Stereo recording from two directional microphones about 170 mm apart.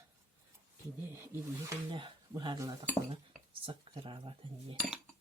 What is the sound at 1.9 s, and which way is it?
Speech, 30° right (ahead or behind).